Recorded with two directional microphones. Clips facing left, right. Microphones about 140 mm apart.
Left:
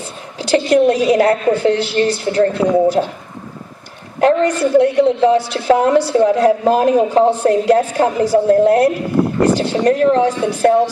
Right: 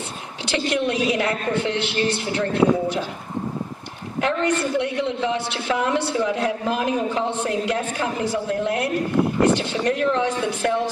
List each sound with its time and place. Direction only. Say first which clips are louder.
0.4 s a woman's voice: left 11 dB; 40° left (ahead or behind)
4.2 s a woman's voice: left 8 dB; 40° left (ahead or behind)